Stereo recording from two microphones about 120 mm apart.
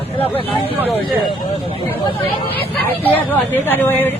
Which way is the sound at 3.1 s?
15° left (ahead or behind).